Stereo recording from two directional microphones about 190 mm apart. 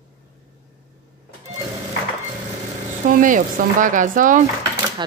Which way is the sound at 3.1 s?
45° right (ahead or behind).